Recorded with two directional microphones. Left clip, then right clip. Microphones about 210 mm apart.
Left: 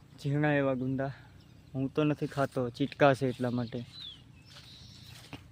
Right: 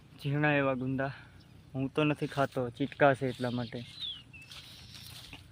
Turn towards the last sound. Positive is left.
turn(degrees=15)  # may be behind; listen again after turning